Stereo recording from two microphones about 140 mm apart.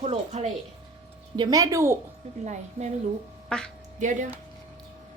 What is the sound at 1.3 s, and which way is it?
Speech, 30° right (ahead or behind).